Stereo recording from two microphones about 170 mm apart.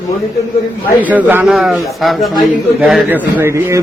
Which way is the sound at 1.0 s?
10° right (ahead or behind).